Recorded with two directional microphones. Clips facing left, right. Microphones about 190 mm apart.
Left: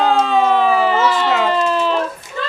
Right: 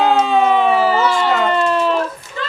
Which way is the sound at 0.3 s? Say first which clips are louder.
Right 1 dB; 5° right (ahead or behind).